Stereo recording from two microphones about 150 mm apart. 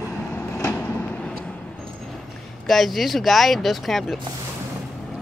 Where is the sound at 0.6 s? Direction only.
15° left (ahead or behind).